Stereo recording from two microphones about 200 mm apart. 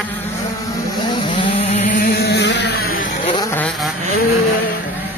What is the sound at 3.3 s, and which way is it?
Vehicle, 10° left (ahead or behind).